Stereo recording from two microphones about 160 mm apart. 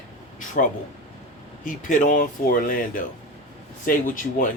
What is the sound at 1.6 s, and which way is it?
Speech, 55° left (ahead or behind).